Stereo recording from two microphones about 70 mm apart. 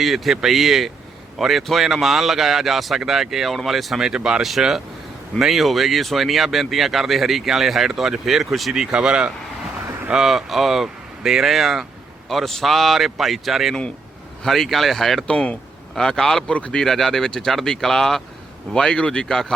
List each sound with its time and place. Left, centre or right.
0.0 s speech: centre
15.3 s speech: centre